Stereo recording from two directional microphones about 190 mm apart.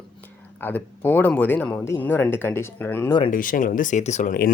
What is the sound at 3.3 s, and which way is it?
Speech, 45° left (ahead or behind).